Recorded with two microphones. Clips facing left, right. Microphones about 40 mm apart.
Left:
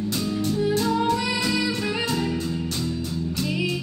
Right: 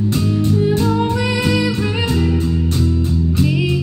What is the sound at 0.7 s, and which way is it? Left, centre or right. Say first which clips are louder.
Music: right 5 dB; right.